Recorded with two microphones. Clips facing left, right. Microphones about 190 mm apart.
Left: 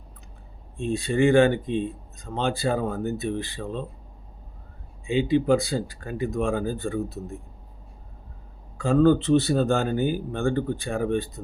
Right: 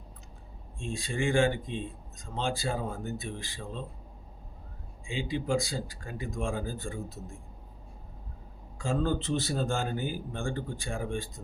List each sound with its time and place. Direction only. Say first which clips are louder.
0.8 s speech: left 11 dB; 65° left (ahead or behind)
5.0 s speech: left 11 dB; 65° left (ahead or behind)
8.8 s speech: left 11 dB; 65° left (ahead or behind)